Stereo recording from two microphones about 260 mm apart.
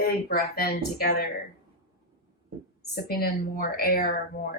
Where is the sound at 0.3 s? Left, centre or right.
Left.